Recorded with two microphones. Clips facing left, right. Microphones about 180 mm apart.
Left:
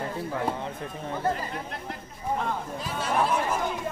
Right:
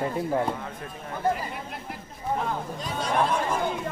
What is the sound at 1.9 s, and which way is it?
Speech, centre (ahead or behind).